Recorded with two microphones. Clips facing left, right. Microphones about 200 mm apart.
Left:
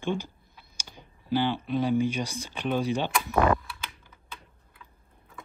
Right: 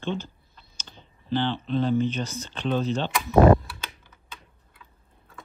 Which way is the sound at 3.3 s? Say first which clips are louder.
Right 9 dB; 30° right (ahead or behind).